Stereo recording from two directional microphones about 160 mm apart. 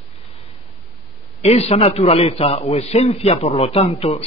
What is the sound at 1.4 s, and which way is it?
A man's voice, 40° left (ahead or behind).